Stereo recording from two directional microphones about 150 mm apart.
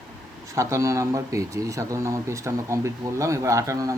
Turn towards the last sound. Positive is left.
turn(degrees=-20)  # may be behind; listen again after turning